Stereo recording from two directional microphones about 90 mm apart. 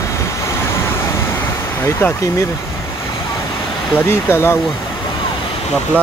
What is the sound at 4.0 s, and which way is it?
Speech, 25° left (ahead or behind).